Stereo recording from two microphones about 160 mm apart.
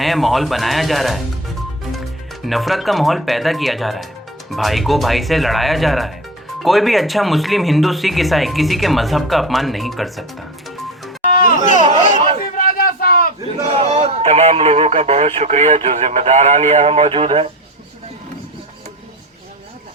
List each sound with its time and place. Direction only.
0.0 s speech: centre (ahead or behind)
11.3 s a sound: 60° left (ahead or behind)
13.8 s speech: 35° right (ahead or behind)